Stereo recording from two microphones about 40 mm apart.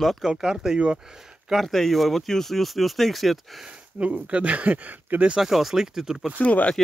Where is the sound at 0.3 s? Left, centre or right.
Centre.